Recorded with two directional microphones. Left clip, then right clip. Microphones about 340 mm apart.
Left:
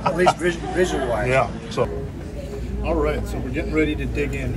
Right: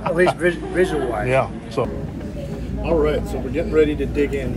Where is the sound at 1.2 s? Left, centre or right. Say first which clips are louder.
Right 1 dB; centre.